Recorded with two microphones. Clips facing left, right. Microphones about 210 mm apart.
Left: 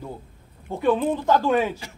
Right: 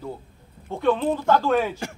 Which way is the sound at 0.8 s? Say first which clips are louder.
Even; 10° left (ahead or behind).